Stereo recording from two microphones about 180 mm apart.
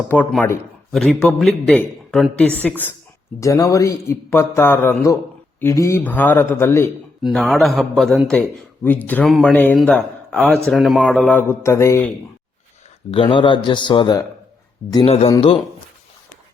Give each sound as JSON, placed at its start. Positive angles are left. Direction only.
{"t": 0.1, "sound": "a man's voice", "side_deg": 10}
{"t": 7.2, "sound": "a man's voice", "side_deg": 0}
{"t": 13.1, "sound": "speech", "side_deg": 30}